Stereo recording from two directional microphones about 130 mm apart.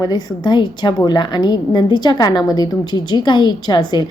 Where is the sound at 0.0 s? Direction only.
30° left (ahead or behind).